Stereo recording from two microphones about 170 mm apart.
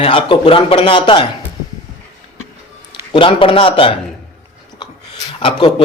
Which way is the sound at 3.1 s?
30° left (ahead or behind).